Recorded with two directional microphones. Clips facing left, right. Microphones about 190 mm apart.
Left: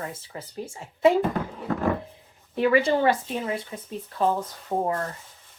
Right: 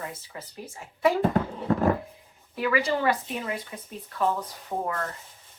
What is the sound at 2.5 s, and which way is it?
A woman's voice, 25° left (ahead or behind).